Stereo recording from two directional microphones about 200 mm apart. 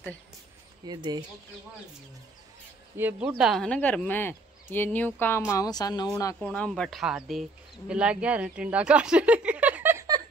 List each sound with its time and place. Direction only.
0.8 s speech: 20° right (ahead or behind)
3.0 s a woman's voice: 10° right (ahead or behind)